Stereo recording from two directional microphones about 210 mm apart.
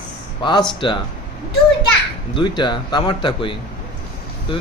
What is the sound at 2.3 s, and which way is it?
Speech, 20° left (ahead or behind).